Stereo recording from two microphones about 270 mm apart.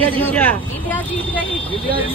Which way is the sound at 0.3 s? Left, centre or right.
Centre.